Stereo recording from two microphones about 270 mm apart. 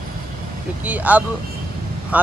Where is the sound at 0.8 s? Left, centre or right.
Centre.